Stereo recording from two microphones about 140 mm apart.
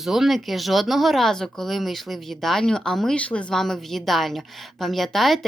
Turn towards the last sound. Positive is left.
turn(degrees=0)  # may be behind; listen again after turning